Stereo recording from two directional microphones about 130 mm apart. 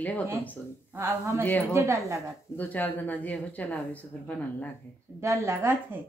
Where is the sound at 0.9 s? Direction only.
20° right (ahead or behind).